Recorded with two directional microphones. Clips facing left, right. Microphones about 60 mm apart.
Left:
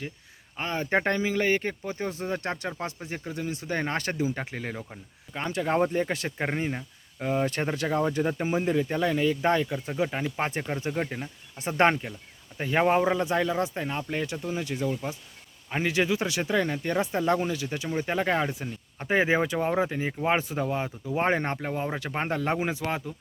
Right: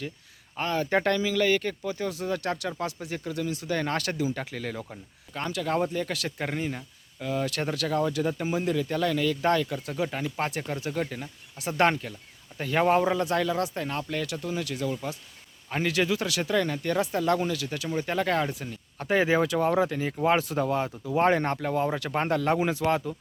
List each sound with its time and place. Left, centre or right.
0.7 s speech: left
5.5 s speech: left